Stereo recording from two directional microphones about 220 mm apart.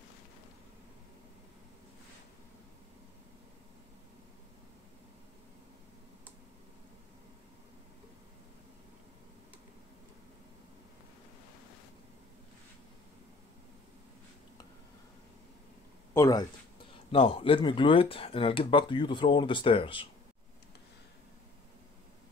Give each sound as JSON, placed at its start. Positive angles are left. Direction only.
{"t": 16.1, "sound": "speech", "side_deg": 15}